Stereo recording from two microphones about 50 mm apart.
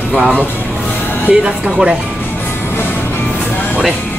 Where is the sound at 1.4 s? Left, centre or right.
Centre.